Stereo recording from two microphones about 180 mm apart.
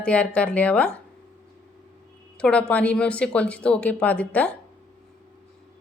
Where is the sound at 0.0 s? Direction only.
5° left (ahead or behind).